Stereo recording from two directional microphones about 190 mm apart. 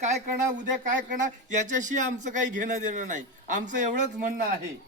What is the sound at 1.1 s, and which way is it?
A man's voice, 40° right (ahead or behind).